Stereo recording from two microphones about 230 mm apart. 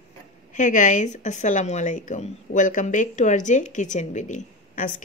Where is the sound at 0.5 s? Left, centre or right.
Left.